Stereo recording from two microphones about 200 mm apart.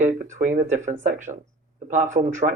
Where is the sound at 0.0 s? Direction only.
40° right (ahead or behind).